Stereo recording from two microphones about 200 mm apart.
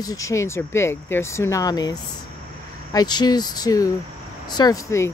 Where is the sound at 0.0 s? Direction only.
15° left (ahead or behind).